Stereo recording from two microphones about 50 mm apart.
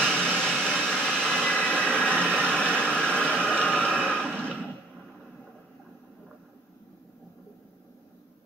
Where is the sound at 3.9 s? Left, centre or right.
Centre.